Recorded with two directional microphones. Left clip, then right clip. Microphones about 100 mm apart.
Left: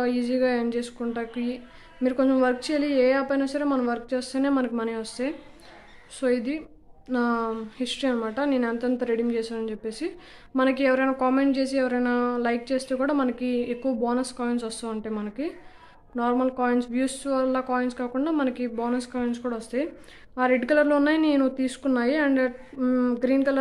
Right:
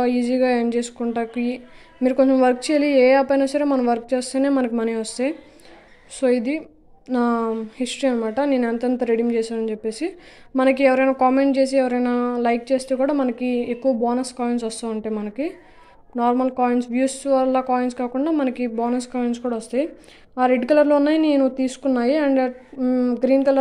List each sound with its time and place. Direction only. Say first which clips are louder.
0.0 s a woman's voice: right 5 dB; 40° right (ahead or behind); by 22.5 s 20° right (ahead or behind)
22.8 s a sound: right 4 dB; 10° right (ahead or behind)
23.2 s a woman's voice: right 8 dB; 20° right (ahead or behind)